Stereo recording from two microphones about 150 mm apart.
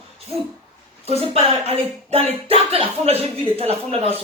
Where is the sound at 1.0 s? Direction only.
40° right (ahead or behind).